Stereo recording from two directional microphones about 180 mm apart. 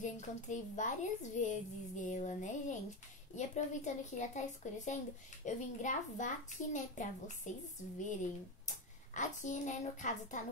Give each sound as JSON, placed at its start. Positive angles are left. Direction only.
{"t": 0.0, "sound": "a woman's voice", "side_deg": 40}